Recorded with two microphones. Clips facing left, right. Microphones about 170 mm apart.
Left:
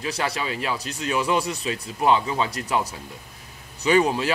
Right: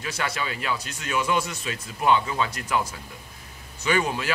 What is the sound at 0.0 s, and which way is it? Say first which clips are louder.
Speech: left 3 dB; 35° left (ahead or behind).